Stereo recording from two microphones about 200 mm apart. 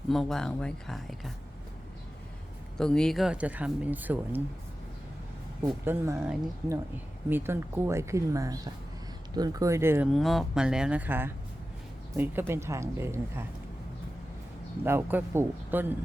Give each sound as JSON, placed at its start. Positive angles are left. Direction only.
{"t": 0.1, "sound": "speech", "side_deg": 0}
{"t": 2.7, "sound": "speech", "side_deg": 5}
{"t": 5.6, "sound": "speech", "side_deg": -15}
{"t": 10.1, "sound": "speech", "side_deg": 0}
{"t": 14.8, "sound": "speech", "side_deg": -10}